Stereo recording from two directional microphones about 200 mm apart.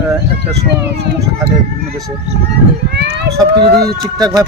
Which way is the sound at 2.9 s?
60° right (ahead or behind).